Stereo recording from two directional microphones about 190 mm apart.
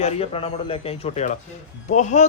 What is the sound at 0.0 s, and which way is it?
A man's voice, 30° left (ahead or behind).